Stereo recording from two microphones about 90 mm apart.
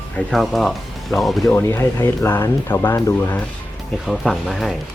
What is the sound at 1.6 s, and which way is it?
Speech, 30° left (ahead or behind).